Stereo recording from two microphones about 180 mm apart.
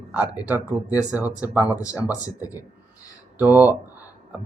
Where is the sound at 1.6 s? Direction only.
20° left (ahead or behind).